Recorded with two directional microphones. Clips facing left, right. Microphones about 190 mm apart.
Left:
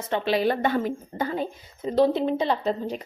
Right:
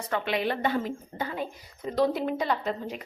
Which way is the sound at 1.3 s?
30° left (ahead or behind).